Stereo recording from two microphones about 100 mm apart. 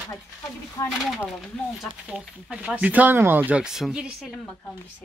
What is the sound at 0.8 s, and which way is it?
Speech, 40° left (ahead or behind).